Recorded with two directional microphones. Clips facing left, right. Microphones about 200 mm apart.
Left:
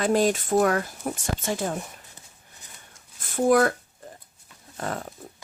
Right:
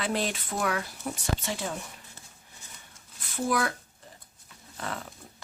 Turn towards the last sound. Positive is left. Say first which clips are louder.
# left 5 dB
turn(degrees=45)  # may be behind; listen again after turning